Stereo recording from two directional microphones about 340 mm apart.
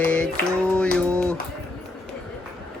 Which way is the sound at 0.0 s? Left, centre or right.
Centre.